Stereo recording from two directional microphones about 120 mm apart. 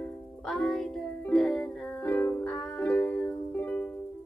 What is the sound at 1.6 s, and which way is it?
Music, 15° left (ahead or behind).